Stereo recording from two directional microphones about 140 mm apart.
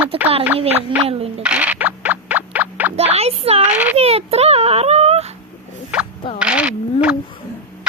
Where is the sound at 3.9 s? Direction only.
45° right (ahead or behind).